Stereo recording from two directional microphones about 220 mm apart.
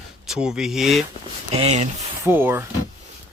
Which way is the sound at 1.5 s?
30° right (ahead or behind).